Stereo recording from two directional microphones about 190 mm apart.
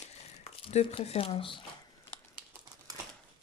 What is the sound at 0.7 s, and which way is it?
Speech, 35° left (ahead or behind).